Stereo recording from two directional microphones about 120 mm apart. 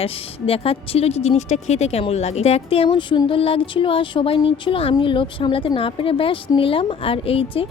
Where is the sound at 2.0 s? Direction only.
60° left (ahead or behind).